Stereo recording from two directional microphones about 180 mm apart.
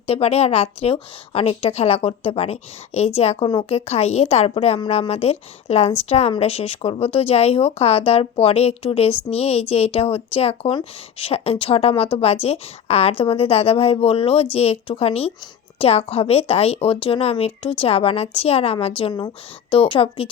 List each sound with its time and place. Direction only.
0.1 s speech: 35° left (ahead or behind)